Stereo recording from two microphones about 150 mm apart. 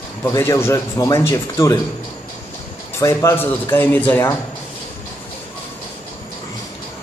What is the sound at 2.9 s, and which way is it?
Speech, 20° left (ahead or behind).